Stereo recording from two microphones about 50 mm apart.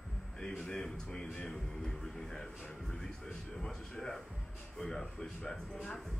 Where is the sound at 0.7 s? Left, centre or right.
Centre.